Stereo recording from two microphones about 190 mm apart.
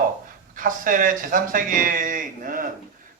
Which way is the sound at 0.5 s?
45° right (ahead or behind).